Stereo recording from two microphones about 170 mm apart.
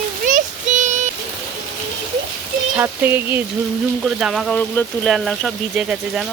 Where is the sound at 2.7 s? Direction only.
15° right (ahead or behind).